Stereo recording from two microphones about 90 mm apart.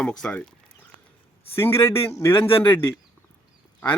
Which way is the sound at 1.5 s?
30° left (ahead or behind).